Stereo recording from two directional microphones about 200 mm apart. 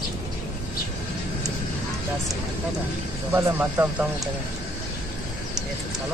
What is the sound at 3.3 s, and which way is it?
Speech, 10° right (ahead or behind).